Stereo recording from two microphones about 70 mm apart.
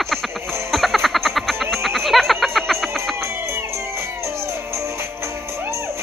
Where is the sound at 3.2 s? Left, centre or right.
Right.